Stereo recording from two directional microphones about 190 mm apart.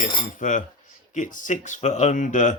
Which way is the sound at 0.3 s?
40° left (ahead or behind).